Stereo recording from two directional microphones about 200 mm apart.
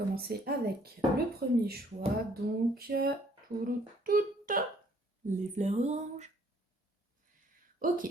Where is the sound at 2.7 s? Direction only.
50° right (ahead or behind).